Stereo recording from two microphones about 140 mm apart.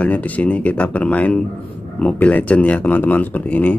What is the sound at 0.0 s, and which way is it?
Speech, 10° left (ahead or behind).